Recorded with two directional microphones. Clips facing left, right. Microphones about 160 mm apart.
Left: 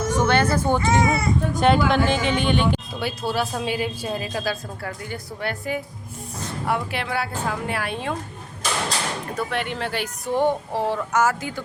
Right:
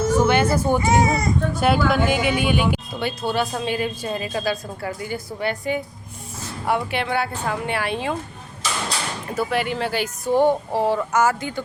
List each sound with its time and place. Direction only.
0.1 s speech: 10° right (ahead or behind)
1.0 s speech: 40° right (ahead or behind)
1.5 s speech: 5° right (ahead or behind)
3.0 s speech: 5° left (ahead or behind)
9.3 s speech: 5° right (ahead or behind)